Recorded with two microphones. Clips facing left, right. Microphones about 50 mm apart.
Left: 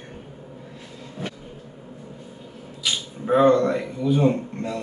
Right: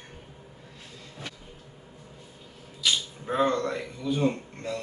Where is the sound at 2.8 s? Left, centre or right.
Centre.